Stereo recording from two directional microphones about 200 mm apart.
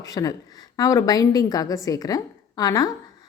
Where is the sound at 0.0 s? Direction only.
15° left (ahead or behind).